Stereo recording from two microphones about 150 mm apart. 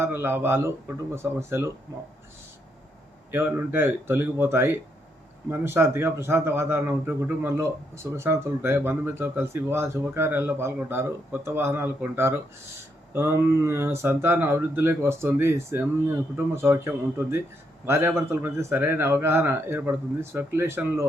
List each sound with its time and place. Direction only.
0.0 s a man's voice: 15° right (ahead or behind)
3.3 s a man's voice: 15° right (ahead or behind)